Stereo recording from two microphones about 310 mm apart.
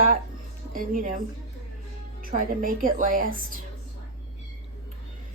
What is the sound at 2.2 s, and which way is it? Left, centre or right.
Speech, right.